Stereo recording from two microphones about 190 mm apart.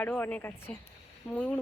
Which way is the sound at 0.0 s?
10° left (ahead or behind).